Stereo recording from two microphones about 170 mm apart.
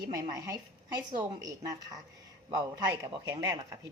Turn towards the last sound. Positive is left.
turn(degrees=-20)  # may be behind; listen again after turning